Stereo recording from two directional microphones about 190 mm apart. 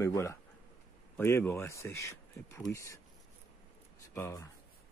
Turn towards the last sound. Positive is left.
turn(degrees=15)  # may be behind; listen again after turning